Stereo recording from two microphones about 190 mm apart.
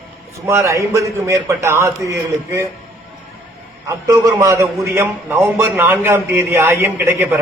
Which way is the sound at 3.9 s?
15° right (ahead or behind).